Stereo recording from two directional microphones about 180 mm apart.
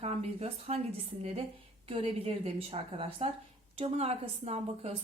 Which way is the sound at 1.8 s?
35° right (ahead or behind).